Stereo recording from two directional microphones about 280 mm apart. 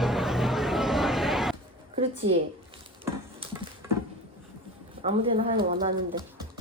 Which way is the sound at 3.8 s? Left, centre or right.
Centre.